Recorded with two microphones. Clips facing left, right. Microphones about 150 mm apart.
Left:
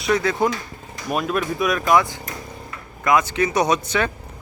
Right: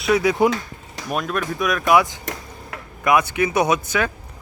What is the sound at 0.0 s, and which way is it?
Speech, 10° right (ahead or behind).